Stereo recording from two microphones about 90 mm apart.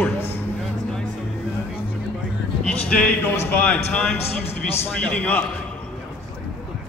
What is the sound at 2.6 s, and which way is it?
A man's voice, 10° left (ahead or behind).